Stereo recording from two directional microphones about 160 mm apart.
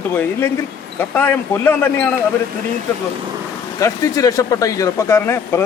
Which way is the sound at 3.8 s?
20° left (ahead or behind).